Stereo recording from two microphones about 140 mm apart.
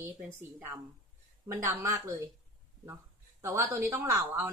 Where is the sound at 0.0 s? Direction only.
15° right (ahead or behind).